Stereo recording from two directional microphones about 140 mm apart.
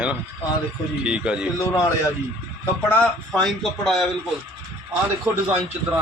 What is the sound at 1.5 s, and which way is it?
Speech, 25° left (ahead or behind).